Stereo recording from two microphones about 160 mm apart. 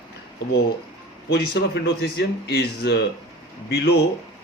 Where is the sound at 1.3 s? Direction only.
90° left.